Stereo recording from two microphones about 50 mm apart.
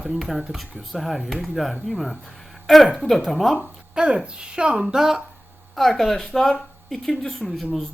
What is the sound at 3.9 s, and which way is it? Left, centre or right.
A woman's voice, centre.